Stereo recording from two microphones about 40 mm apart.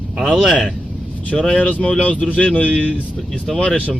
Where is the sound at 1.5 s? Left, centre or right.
Left.